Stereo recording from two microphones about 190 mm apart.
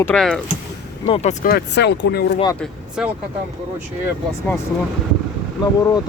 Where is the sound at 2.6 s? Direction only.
5° right (ahead or behind).